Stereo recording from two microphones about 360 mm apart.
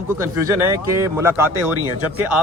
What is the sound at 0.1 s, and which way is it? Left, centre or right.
Speech, centre.